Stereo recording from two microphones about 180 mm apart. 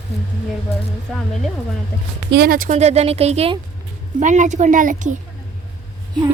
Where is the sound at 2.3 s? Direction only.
55° right (ahead or behind).